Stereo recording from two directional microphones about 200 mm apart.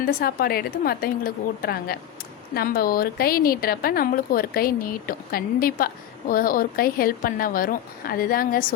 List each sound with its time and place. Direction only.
0.0 s a woman's voice: 45° left (ahead or behind)